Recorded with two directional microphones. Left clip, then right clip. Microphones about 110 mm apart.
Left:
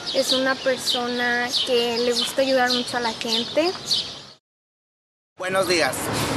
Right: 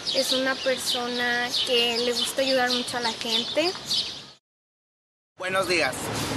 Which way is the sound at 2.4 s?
20° right (ahead or behind).